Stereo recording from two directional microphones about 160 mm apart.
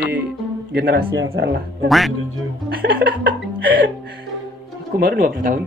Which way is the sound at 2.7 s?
70° right (ahead or behind).